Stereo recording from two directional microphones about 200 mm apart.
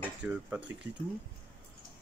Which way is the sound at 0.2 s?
5° right (ahead or behind).